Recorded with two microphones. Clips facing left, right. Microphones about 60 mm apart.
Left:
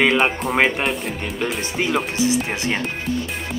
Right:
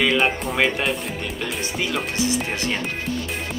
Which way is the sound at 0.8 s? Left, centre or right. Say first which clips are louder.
Left 1 dB; centre.